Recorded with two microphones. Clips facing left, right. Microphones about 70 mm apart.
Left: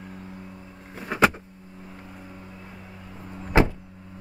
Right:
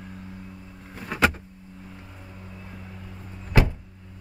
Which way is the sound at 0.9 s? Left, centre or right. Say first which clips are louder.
Left 2 dB; centre.